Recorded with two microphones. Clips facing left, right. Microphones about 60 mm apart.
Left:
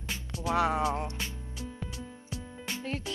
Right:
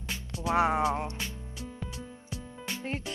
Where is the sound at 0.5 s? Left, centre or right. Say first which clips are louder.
Right 2 dB; right.